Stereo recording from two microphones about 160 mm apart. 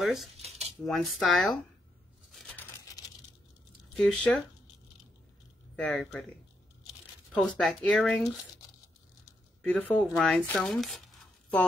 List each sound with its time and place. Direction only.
0.0 s speech: centre (ahead or behind)
0.4 s a sound: 40° right (ahead or behind)
0.8 s speech: centre (ahead or behind)
2.3 s a sound: 5° left (ahead or behind)
3.9 s speech: centre (ahead or behind)
5.8 s speech: 5° left (ahead or behind)
7.3 s speech: 5° left (ahead or behind)
9.6 s speech: 10° left (ahead or behind)